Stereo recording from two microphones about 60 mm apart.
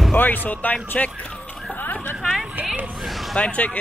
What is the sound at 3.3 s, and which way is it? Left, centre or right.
Speech, left.